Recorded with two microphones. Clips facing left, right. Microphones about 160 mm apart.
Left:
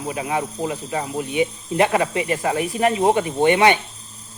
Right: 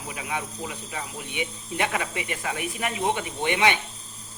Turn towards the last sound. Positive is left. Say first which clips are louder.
# left 8 dB
turn(degrees=35)  # may be behind; listen again after turning